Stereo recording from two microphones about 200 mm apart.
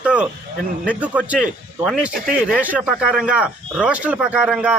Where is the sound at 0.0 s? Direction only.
5° right (ahead or behind).